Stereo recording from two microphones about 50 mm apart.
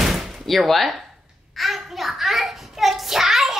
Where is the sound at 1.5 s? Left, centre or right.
Centre.